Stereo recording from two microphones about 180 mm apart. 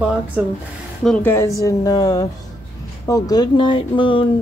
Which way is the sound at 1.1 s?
15° left (ahead or behind).